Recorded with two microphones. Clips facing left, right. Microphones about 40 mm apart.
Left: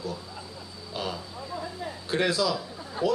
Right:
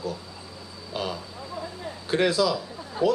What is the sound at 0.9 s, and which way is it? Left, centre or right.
Speech, centre.